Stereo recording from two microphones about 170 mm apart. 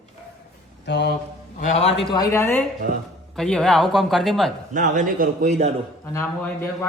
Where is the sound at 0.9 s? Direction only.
90° left.